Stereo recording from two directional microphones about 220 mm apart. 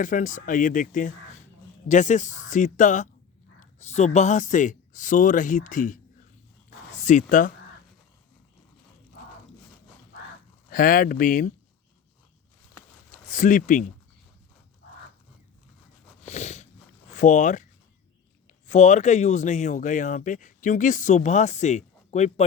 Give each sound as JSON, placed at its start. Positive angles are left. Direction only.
{"t": 0.0, "sound": "speech", "side_deg": 35}
{"t": 10.7, "sound": "speech", "side_deg": 40}
{"t": 13.1, "sound": "a sound", "side_deg": 35}
{"t": 16.2, "sound": "a sound", "side_deg": 30}
{"t": 17.2, "sound": "speech", "side_deg": 35}
{"t": 18.7, "sound": "speech", "side_deg": 35}